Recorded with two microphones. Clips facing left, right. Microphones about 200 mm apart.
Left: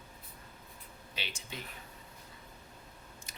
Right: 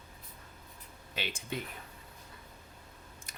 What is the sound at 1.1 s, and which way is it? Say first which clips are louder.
Speech: right 6 dB; 50° right (ahead or behind).